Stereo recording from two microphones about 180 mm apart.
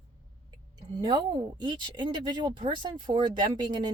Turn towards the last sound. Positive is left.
turn(degrees=-25)  # may be behind; listen again after turning